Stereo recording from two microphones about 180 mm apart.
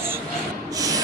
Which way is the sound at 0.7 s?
20° right (ahead or behind).